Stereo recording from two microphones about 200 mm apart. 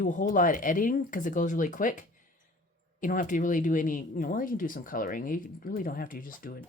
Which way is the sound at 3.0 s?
40° left (ahead or behind).